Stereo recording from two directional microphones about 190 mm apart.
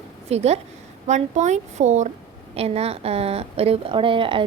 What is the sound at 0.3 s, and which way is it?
A woman's voice, 35° right (ahead or behind).